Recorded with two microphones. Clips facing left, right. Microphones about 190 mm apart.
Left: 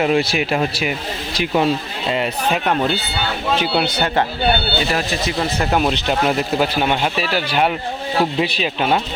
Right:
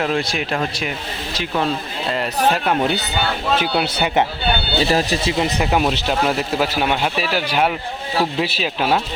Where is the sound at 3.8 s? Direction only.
10° right (ahead or behind).